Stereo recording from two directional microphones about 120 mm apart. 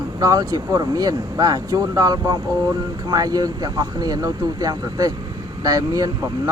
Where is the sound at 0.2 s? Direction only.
30° right (ahead or behind).